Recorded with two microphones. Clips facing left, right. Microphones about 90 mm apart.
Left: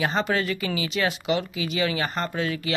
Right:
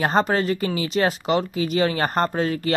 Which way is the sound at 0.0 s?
40° right (ahead or behind).